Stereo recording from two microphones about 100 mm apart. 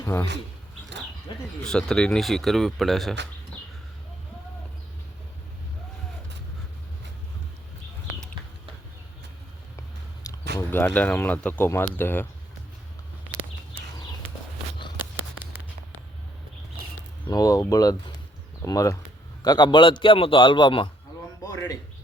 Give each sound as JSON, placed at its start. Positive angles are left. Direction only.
{"t": 0.0, "sound": "speech", "side_deg": 25}
{"t": 1.6, "sound": "speech", "side_deg": 5}
{"t": 10.3, "sound": "a sound", "side_deg": 35}
{"t": 10.7, "sound": "speech", "side_deg": 20}
{"t": 14.8, "sound": "a sound", "side_deg": 50}
{"t": 17.2, "sound": "a man's voice", "side_deg": 40}
{"t": 21.4, "sound": "a man's voice", "side_deg": 35}